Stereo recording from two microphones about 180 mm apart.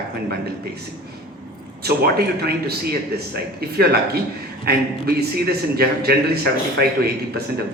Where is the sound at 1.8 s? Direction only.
60° right (ahead or behind).